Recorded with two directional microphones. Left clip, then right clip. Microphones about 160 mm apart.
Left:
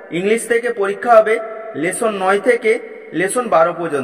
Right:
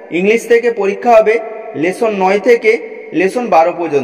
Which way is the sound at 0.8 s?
15° right (ahead or behind).